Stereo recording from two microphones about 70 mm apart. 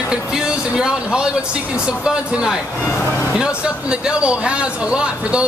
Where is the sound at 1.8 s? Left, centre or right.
Centre.